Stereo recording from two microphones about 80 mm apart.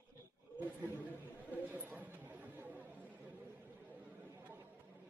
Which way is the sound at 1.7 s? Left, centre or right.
Right.